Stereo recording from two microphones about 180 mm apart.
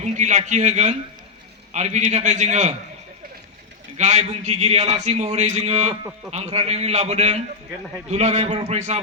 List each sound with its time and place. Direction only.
0.0 s a man's voice: 40° right (ahead or behind)
3.9 s a man's voice: 40° right (ahead or behind)